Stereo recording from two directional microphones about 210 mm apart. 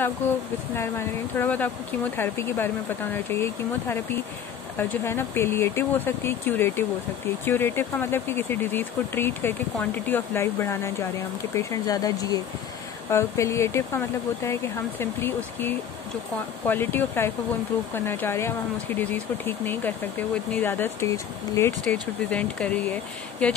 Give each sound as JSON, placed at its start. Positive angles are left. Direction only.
{"t": 0.7, "sound": "speech", "side_deg": 10}
{"t": 4.7, "sound": "speech", "side_deg": 10}